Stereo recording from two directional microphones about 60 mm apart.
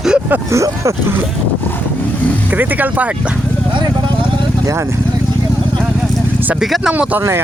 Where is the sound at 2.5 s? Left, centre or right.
Right.